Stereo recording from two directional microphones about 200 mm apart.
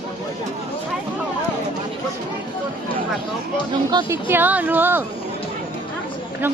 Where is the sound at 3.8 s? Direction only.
20° right (ahead or behind).